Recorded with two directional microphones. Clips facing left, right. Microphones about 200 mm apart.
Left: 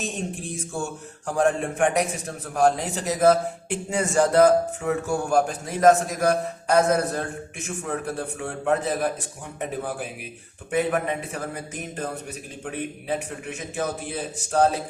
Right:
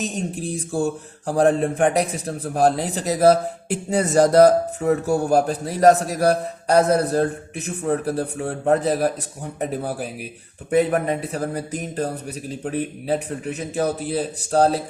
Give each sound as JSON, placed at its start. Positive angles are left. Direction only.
{"t": 0.0, "sound": "a man's voice", "side_deg": -40}